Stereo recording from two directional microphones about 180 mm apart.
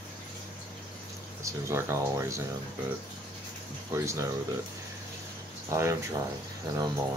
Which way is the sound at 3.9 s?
15° right (ahead or behind).